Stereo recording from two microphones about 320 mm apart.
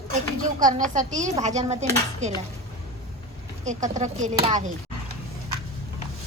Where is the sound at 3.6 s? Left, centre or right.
Right.